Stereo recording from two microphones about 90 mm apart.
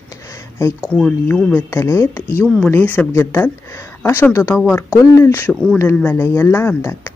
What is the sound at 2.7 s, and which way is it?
Speech, 20° left (ahead or behind).